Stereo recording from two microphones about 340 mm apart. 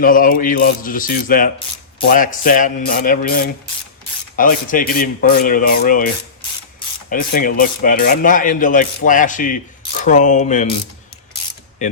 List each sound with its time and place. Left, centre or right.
0.0 s speech: left
7.1 s speech: left
11.8 s speech: left